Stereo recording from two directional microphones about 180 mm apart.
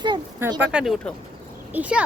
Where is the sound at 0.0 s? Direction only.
25° right (ahead or behind).